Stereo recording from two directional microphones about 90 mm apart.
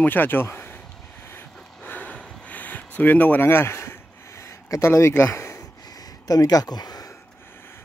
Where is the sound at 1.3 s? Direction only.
20° left (ahead or behind).